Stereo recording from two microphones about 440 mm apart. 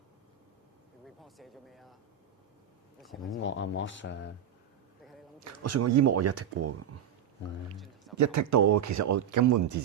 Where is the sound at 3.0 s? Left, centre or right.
Centre.